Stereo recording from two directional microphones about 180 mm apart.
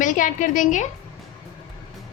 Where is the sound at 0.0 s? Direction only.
45° left (ahead or behind).